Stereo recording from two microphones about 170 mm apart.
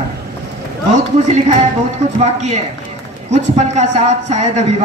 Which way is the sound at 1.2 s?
40° right (ahead or behind).